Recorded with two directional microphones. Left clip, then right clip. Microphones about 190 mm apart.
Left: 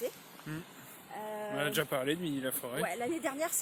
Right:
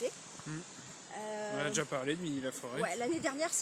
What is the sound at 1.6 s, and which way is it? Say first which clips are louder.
Speech: left 4 dB; 20° left (ahead or behind).